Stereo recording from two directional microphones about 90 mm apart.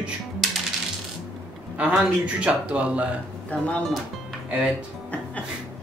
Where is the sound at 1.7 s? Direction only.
15° right (ahead or behind).